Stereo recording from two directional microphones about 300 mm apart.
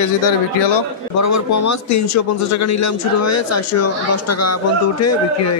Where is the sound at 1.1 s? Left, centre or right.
Left.